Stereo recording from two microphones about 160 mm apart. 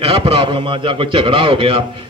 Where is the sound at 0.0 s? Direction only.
35° right (ahead or behind).